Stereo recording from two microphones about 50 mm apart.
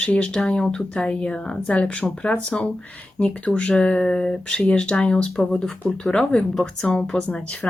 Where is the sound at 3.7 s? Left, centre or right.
Centre.